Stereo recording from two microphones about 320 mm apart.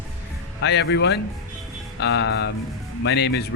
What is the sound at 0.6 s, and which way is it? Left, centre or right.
Speech, left.